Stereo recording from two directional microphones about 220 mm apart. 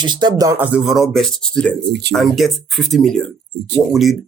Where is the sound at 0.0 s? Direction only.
20° right (ahead or behind); by 1.7 s 5° left (ahead or behind).